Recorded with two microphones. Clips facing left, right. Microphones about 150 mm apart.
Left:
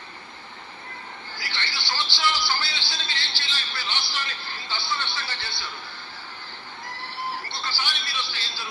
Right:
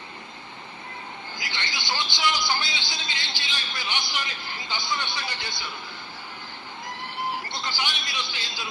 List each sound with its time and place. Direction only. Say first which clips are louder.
1.4 s speech: even; 15° right (ahead or behind)
7.3 s a man's voice: right 1 dB; 15° right (ahead or behind)